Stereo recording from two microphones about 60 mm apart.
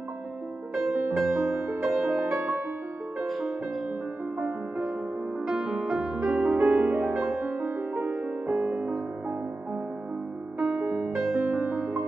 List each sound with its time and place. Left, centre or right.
0.7 s music: centre
3.3 s music: centre
4.4 s music: centre
7.2 s music: centre
7.9 s music: right
8.5 s music: right
11.2 s music: centre